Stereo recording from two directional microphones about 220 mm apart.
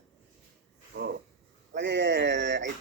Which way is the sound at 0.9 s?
50° right (ahead or behind).